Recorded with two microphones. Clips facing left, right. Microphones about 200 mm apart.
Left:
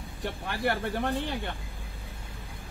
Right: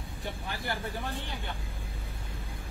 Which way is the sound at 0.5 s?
65° left (ahead or behind).